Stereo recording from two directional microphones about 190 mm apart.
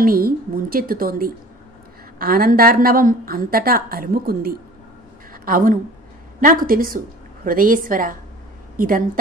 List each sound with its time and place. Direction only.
0.0 s a woman's voice: 50° right (ahead or behind)
5.3 s a sound: 50° right (ahead or behind)
6.4 s a woman's voice: 45° right (ahead or behind)